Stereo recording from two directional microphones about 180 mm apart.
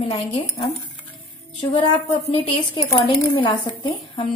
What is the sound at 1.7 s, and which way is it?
Speech, 35° left (ahead or behind).